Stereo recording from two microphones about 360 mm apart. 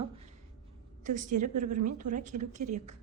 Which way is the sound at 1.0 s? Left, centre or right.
Right.